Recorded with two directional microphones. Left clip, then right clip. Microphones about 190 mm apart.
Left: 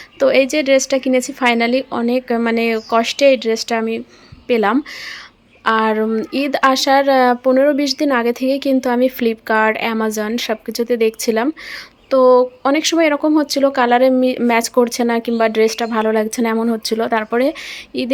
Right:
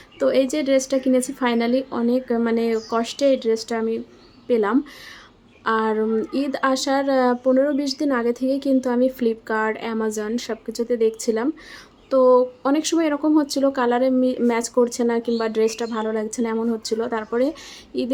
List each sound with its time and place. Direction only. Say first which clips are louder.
0.2 s a woman's voice: left 6 dB; 25° left (ahead or behind)